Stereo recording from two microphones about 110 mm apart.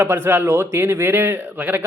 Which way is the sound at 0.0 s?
20° right (ahead or behind).